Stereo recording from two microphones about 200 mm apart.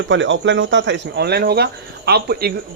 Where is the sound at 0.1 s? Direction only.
65° right (ahead or behind).